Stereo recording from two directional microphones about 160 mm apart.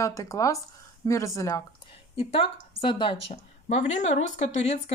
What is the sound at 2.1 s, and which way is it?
Speech, 35° left (ahead or behind).